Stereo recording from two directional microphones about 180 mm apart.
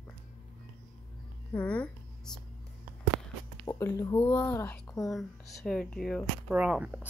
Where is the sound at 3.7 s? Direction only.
15° left (ahead or behind).